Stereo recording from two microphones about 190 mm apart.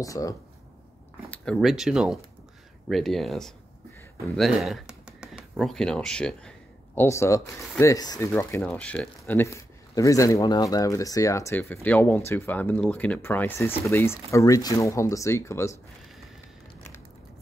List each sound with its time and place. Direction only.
0.0 s speech: 20° left (ahead or behind)
1.3 s speech: 5° left (ahead or behind)
7.0 s speech: 15° left (ahead or behind)